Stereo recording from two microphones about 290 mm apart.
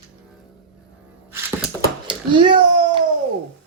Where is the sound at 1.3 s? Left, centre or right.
Centre.